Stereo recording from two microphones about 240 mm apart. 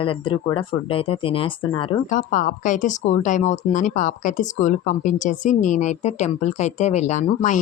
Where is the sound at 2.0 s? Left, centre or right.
Left.